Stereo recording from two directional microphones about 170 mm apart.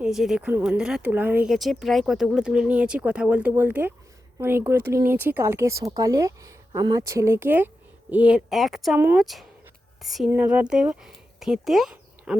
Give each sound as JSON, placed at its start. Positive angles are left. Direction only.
{"t": 0.0, "sound": "speech", "side_deg": 0}